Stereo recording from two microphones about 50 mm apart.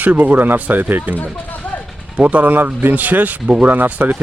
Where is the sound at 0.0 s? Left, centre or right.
Right.